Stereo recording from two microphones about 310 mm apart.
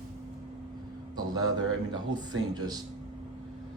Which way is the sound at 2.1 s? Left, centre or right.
Centre.